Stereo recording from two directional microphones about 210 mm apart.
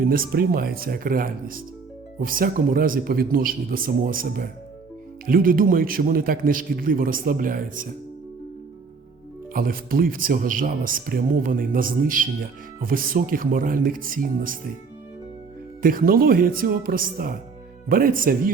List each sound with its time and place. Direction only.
0.0 s speech: 45° right (ahead or behind)
9.5 s speech: 45° right (ahead or behind)
15.8 s speech: 40° right (ahead or behind)